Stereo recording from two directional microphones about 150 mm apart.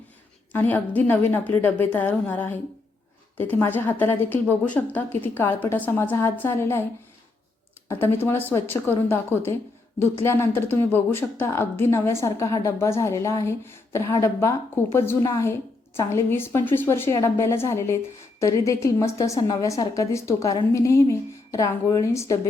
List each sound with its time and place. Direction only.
0.5 s a woman's voice: 10° left (ahead or behind)
7.9 s a woman's voice: 15° left (ahead or behind)